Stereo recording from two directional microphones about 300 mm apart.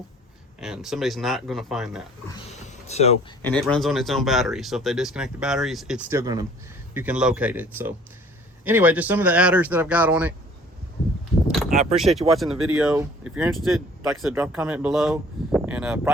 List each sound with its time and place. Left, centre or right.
0.6 s speech: centre
2.6 s speech: left
3.4 s speech: centre
11.7 s speech: right
11.9 s speech: centre